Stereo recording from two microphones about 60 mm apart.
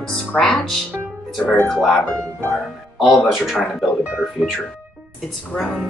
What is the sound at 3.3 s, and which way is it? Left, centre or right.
Speech, centre.